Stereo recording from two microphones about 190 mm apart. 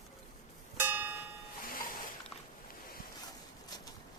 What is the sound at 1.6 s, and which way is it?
Music, 50° left (ahead or behind).